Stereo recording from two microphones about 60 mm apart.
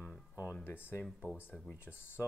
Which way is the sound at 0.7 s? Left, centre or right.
Left.